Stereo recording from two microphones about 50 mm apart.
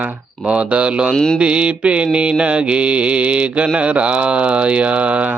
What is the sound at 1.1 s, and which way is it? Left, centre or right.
Mantra, centre.